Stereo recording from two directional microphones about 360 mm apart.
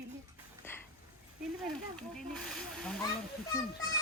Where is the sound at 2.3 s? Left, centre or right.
Centre.